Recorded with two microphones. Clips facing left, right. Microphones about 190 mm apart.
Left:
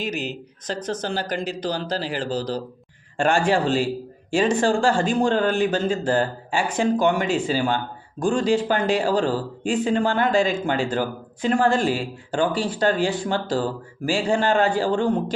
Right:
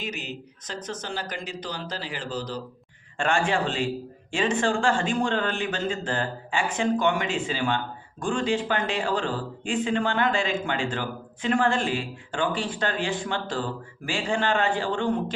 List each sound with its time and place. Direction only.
0.0 s speech: 35° left (ahead or behind)